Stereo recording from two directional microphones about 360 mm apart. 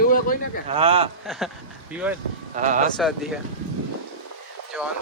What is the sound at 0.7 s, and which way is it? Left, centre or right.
Speech, centre.